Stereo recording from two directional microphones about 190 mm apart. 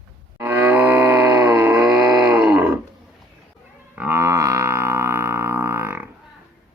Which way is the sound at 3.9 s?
10° right (ahead or behind).